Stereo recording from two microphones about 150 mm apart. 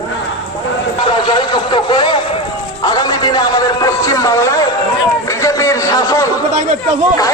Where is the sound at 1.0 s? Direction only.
30° left (ahead or behind).